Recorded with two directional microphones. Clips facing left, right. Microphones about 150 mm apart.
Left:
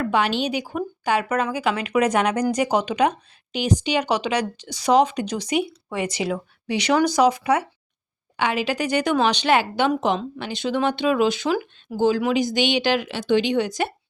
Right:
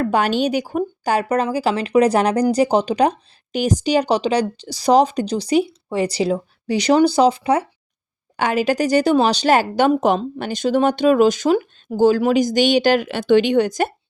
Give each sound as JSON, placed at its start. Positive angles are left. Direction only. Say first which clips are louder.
{"t": 0.0, "sound": "a woman's voice", "louder": "right 4 dB", "side_deg": -45}
{"t": 8.4, "sound": "a woman's voice", "louder": "right 5 dB", "side_deg": -45}